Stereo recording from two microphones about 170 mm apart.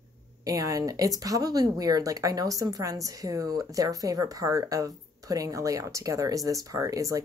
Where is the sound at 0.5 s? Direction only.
20° right (ahead or behind).